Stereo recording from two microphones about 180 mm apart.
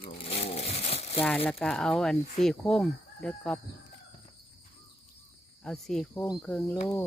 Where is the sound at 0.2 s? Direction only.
35° left (ahead or behind).